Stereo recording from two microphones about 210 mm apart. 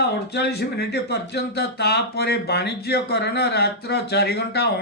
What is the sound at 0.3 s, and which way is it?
Speech, 50° left (ahead or behind).